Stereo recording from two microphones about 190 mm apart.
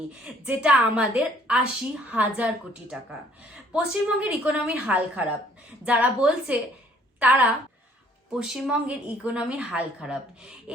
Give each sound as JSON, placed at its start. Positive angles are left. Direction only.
{"t": 0.4, "sound": "a woman's voice", "side_deg": -5}
{"t": 3.7, "sound": "a woman's voice", "side_deg": -5}